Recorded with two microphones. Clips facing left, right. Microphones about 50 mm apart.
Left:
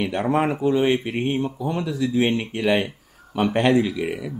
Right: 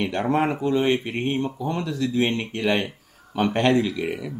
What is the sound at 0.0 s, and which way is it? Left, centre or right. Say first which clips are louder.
Speech: left 1 dB; centre.